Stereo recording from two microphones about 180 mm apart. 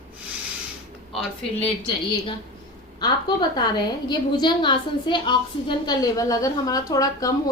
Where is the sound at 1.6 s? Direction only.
30° left (ahead or behind).